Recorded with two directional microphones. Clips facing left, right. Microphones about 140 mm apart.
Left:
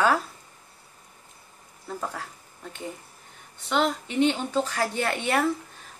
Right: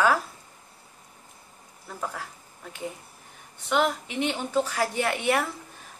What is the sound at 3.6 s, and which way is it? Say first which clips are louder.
A woman's voice: even; 10° right (ahead or behind).